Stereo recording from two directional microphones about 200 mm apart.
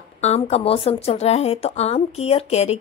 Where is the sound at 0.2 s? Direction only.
30° left (ahead or behind).